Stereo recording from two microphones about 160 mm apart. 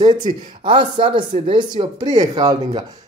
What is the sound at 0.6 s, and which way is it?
Speech, 30° right (ahead or behind).